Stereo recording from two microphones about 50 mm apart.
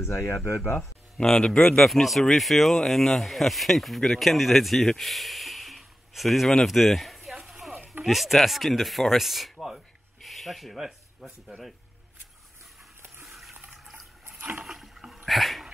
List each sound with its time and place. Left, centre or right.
0.0 s speech: left
1.1 s speech: centre
1.8 s speech: centre
10.2 s rub: centre
13.2 s water: centre
14.6 s rowboat: centre
15.2 s dog: centre